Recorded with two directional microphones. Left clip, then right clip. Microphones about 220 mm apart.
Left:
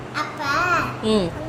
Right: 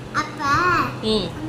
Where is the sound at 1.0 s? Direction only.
35° left (ahead or behind).